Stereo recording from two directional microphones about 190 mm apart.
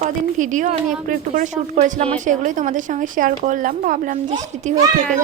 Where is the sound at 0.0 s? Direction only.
40° right (ahead or behind).